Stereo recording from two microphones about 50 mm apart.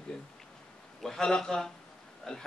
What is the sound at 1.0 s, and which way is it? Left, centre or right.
Speech, centre.